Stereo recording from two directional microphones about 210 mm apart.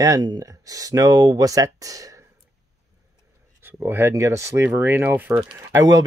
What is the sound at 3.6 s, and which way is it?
Speech, 10° right (ahead or behind).